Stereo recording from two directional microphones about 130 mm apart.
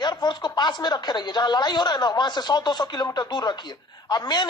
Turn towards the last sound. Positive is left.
turn(degrees=35)  # may be behind; listen again after turning